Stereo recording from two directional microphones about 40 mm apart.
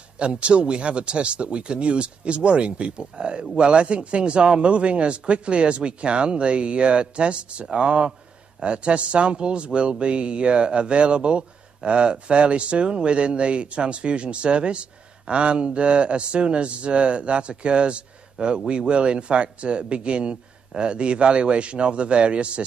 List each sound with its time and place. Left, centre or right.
0.2 s speech: right